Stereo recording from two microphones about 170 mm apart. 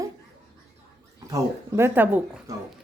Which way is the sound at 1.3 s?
15° right (ahead or behind).